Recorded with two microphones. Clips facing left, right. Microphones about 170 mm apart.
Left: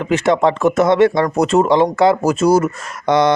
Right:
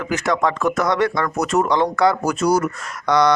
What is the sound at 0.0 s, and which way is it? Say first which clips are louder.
Speech: left 6 dB; 25° left (ahead or behind).